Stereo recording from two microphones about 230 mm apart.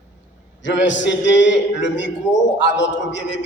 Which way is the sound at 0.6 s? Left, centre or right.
Left.